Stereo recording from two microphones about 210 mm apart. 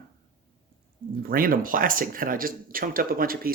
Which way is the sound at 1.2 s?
45° right (ahead or behind).